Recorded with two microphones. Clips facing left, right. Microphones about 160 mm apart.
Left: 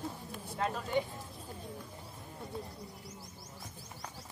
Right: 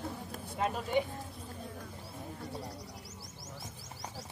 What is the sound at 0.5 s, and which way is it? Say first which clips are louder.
Speech: right 2 dB; 15° right (ahead or behind).